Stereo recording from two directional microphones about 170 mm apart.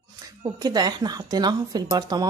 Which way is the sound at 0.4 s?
25° right (ahead or behind).